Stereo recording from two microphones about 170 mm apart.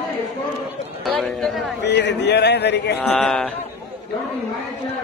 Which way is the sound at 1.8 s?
90° left.